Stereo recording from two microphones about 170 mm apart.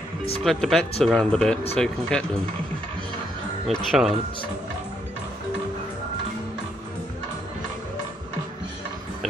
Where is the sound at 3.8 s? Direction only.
Centre (ahead or behind).